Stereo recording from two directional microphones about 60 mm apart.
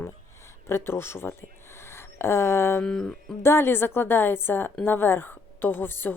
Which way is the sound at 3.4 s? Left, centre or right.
Left.